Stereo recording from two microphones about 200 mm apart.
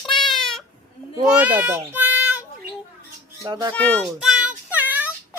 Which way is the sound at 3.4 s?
15° right (ahead or behind).